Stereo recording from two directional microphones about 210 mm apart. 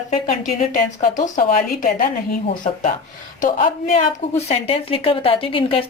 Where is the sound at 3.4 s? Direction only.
35° left (ahead or behind).